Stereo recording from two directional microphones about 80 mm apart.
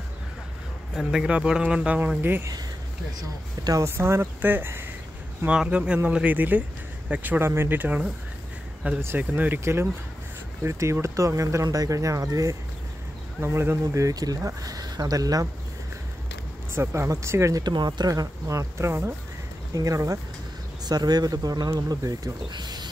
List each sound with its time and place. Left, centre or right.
0.9 s speech: centre
2.0 s speech: right
3.8 s speech: right
5.5 s speech: centre; by 12.5 s right
13.4 s speech: right
14.0 s speech: right
16.7 s speech: right
17.6 s speech: right
19.7 s speech: right
20.8 s speech: right
22.5 s a sound: right